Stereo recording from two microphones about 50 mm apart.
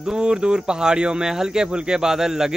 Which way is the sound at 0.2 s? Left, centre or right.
Centre.